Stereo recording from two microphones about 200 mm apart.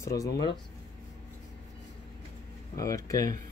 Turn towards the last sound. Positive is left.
turn(degrees=15)  # may be behind; listen again after turning